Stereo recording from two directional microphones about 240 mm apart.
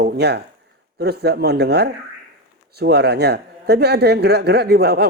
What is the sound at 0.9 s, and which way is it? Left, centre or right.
Speech, right.